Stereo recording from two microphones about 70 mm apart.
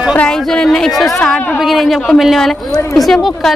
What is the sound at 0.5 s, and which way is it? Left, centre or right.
A woman's voice, centre.